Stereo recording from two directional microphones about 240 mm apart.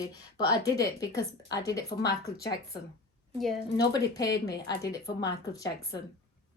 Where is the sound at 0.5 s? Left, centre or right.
Centre.